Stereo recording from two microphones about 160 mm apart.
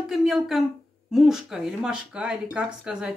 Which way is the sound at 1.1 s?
Centre (ahead or behind).